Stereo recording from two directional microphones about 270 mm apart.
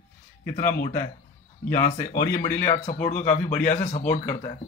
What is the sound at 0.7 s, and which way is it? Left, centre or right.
Speech, left.